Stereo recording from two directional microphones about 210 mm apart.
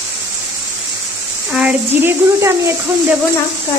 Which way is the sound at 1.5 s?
5° right (ahead or behind).